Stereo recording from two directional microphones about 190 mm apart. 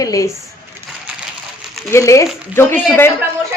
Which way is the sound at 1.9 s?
15° left (ahead or behind).